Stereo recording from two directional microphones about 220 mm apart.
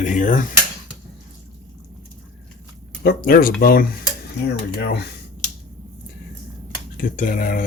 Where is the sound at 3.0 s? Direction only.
45° left (ahead or behind).